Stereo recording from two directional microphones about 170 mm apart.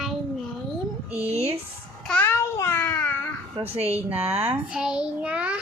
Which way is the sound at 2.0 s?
10° left (ahead or behind).